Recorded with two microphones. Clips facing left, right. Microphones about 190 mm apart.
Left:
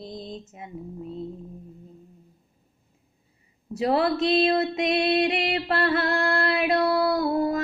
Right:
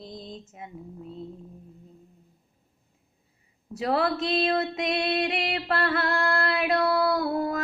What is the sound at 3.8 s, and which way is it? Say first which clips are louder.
Music: left 3 dB; centre (ahead or behind).